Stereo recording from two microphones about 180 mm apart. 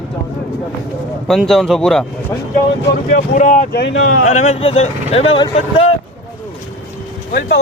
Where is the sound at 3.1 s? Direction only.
45° left (ahead or behind).